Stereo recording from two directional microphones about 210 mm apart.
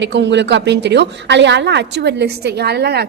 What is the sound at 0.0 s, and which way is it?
A woman's voice, 55° right (ahead or behind).